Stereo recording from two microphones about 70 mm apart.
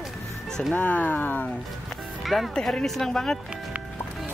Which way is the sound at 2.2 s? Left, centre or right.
Centre.